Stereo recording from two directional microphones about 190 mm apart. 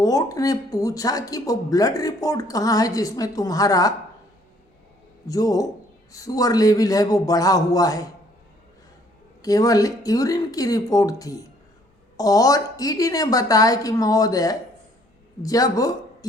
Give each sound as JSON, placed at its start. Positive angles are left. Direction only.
{"t": 0.0, "sound": "speech", "side_deg": 20}
{"t": 5.2, "sound": "a man's voice", "side_deg": 20}
{"t": 9.4, "sound": "speech", "side_deg": 20}